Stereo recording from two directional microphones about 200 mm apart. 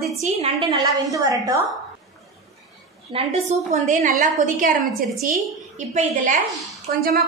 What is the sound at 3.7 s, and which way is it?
A woman's voice, 40° right (ahead or behind).